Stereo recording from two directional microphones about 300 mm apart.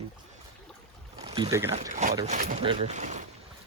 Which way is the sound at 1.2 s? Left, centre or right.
Centre.